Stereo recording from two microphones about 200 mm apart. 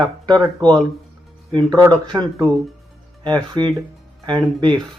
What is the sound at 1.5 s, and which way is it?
Speech, 20° right (ahead or behind).